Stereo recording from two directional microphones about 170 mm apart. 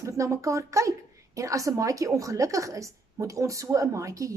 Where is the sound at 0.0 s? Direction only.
20° right (ahead or behind).